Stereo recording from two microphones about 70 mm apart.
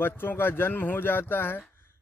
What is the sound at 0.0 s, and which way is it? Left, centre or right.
Speech, left.